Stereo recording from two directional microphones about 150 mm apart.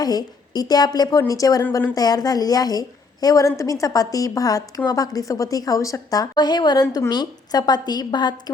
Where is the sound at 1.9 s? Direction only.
25° left (ahead or behind).